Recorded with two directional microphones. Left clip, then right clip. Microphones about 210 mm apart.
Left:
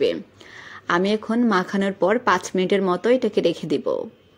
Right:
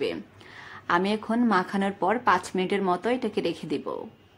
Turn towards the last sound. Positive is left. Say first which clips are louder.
# left 8 dB
turn(degrees=20)  # may be behind; listen again after turning